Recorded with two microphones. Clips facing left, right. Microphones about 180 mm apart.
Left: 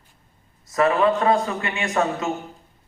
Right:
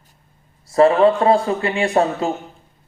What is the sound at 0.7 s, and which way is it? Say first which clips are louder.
A man's voice: right 6 dB; 30° right (ahead or behind).